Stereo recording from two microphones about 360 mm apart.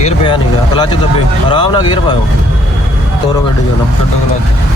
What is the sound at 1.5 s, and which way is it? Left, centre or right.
Speech, centre.